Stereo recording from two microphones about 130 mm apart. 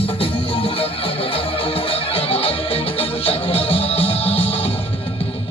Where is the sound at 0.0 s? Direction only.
45° left (ahead or behind).